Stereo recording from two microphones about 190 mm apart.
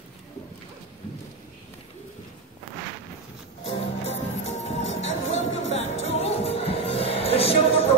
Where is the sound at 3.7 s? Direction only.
35° left (ahead or behind).